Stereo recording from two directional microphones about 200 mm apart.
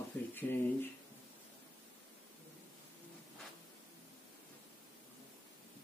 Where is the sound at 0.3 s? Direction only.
10° left (ahead or behind).